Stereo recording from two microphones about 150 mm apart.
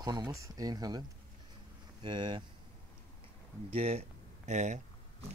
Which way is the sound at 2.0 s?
30° right (ahead or behind).